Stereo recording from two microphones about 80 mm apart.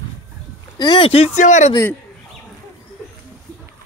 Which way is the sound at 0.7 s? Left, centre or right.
Left.